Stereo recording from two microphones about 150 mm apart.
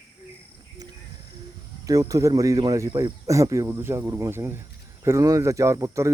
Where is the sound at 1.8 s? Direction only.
20° right (ahead or behind).